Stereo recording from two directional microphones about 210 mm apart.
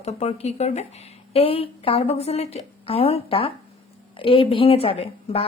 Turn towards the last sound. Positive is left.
turn(degrees=30)  # may be behind; listen again after turning